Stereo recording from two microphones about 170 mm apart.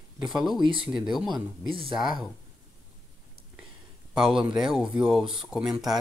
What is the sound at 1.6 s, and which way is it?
Speech, 30° right (ahead or behind).